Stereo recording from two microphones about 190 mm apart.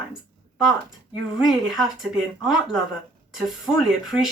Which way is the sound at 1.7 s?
Centre (ahead or behind).